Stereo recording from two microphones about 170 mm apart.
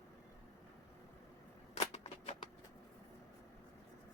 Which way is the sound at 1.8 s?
40° left (ahead or behind).